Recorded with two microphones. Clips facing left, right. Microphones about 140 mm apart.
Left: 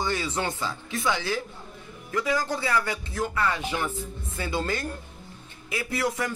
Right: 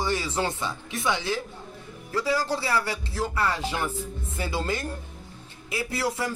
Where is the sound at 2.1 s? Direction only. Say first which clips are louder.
Right 1 dB; 30° right (ahead or behind).